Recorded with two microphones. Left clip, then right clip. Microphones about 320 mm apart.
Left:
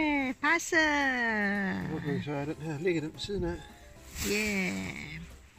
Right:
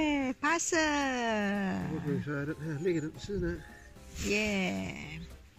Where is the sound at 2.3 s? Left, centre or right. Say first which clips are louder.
Left 1 dB; left.